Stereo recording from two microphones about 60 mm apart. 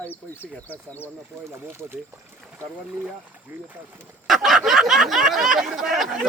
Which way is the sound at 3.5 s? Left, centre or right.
Right.